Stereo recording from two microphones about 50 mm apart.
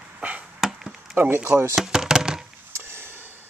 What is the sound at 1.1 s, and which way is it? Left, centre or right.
Speech, right.